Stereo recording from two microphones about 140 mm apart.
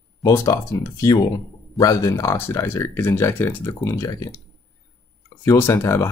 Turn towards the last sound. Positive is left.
turn(degrees=20)  # may be behind; listen again after turning